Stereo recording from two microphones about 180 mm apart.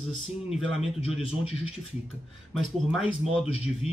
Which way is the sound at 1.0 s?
30° left (ahead or behind).